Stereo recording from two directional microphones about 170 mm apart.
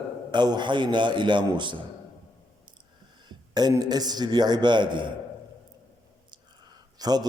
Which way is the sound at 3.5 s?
25° right (ahead or behind).